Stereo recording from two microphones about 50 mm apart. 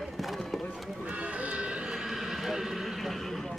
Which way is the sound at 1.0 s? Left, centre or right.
Right.